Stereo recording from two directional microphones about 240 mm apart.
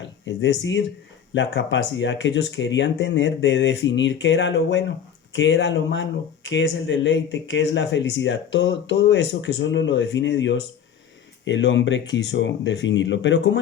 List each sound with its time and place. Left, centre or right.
0.3 s speech: left